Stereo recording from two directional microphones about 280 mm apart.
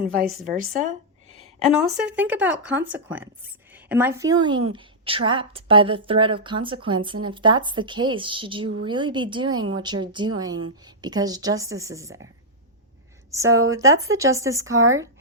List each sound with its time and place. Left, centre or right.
0.5 s a sound: right
1.6 s a woman's voice: centre
13.3 s a woman's voice: centre